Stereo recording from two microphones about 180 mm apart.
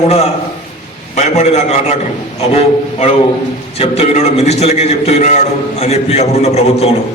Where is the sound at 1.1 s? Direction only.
40° left (ahead or behind).